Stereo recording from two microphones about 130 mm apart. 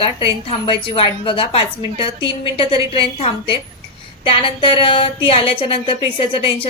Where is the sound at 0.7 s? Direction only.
40° left (ahead or behind).